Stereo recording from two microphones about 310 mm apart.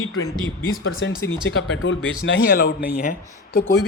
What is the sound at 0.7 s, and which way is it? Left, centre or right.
A man's voice, left.